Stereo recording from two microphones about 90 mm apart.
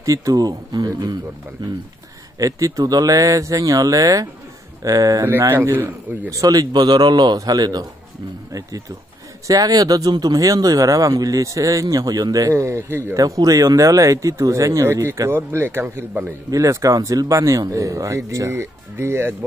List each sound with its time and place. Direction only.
0.0 s speech: 40° right (ahead or behind)
2.3 s speech: 40° right (ahead or behind)
5.4 s speech: 25° right (ahead or behind)
6.3 s speech: 40° right (ahead or behind)
9.5 s speech: 45° right (ahead or behind); by 16.3 s 20° right (ahead or behind)
16.4 s speech: 40° right (ahead or behind)